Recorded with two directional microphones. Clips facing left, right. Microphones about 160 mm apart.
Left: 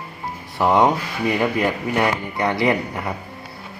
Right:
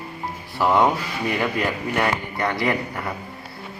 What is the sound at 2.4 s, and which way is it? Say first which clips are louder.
Speech: left 4 dB; 15° left (ahead or behind).